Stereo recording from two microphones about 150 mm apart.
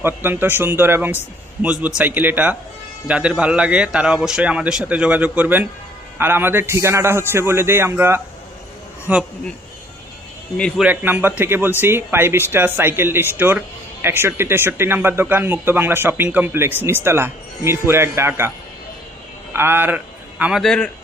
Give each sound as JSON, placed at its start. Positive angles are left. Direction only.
{"t": 0.0, "sound": "speech", "side_deg": -15}
{"t": 10.6, "sound": "a man's voice", "side_deg": 5}
{"t": 10.8, "sound": "speech", "side_deg": -10}
{"t": 19.5, "sound": "speech", "side_deg": -15}
{"t": 20.4, "sound": "a man's voice", "side_deg": 0}